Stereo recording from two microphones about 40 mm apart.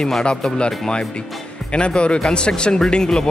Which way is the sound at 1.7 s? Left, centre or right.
Left.